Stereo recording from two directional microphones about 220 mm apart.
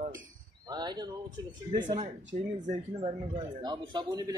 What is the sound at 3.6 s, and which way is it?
Speech, 20° right (ahead or behind).